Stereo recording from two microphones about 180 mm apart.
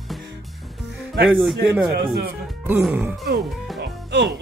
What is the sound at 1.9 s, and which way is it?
Speech, 60° right (ahead or behind).